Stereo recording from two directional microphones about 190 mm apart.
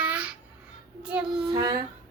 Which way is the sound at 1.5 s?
20° right (ahead or behind).